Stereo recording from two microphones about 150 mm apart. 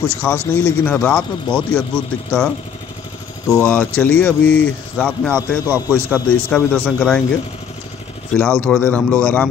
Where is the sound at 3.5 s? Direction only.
10° left (ahead or behind).